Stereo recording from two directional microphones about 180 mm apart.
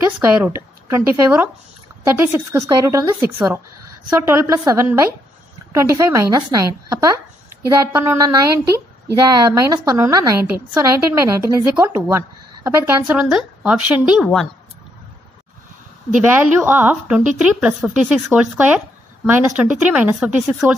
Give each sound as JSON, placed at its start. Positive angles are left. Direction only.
{"t": 0.3, "sound": "a woman's voice", "side_deg": -10}
{"t": 16.6, "sound": "a woman's voice", "side_deg": -10}